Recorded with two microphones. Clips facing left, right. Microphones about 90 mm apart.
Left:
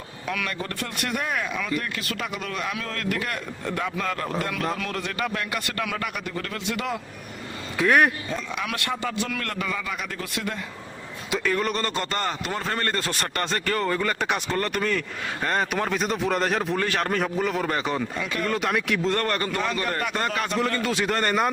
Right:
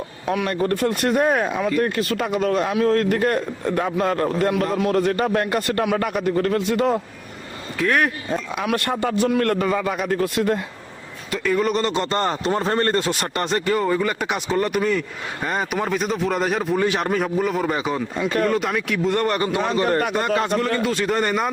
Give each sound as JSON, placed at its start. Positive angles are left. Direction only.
{"t": 0.3, "sound": "speech", "side_deg": -35}
{"t": 0.7, "sound": "speech", "side_deg": -45}
{"t": 7.8, "sound": "speech", "side_deg": 5}
{"t": 8.7, "sound": "a man's voice", "side_deg": -45}
{"t": 11.4, "sound": "speech", "side_deg": -5}
{"t": 11.7, "sound": "speech", "side_deg": -20}
{"t": 12.1, "sound": "speech", "side_deg": -35}
{"t": 13.0, "sound": "speech", "side_deg": -15}
{"t": 16.8, "sound": "speech", "side_deg": -15}
{"t": 17.1, "sound": "speech", "side_deg": -5}
{"t": 19.0, "sound": "speech", "side_deg": -15}
{"t": 19.6, "sound": "speech", "side_deg": -30}
{"t": 20.8, "sound": "speech", "side_deg": 0}